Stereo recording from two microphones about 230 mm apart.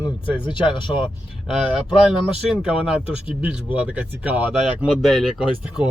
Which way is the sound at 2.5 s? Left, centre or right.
Centre.